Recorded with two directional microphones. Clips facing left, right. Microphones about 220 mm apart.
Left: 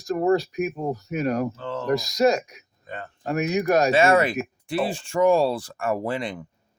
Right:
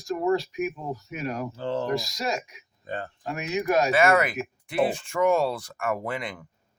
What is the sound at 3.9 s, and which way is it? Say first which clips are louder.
Speech: left 3 dB; 25° left (ahead or behind).